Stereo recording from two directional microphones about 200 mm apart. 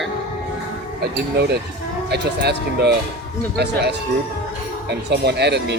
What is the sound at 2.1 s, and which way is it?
Speech, 55° right (ahead or behind).